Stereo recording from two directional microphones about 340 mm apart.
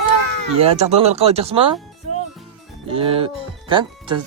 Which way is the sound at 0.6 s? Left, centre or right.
Centre.